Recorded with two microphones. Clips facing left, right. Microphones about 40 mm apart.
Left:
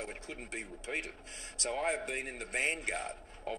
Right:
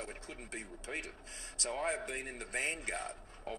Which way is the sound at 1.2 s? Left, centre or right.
Left.